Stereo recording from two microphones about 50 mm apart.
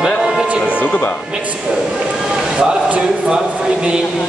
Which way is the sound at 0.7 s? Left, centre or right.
Left.